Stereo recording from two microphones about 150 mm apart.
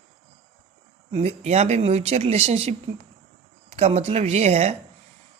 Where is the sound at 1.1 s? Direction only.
40° right (ahead or behind).